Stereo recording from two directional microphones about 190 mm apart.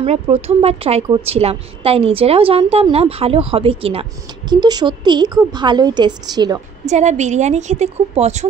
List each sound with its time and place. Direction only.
0.0 s a woman's voice: 35° right (ahead or behind)
6.9 s a woman's voice: 35° right (ahead or behind)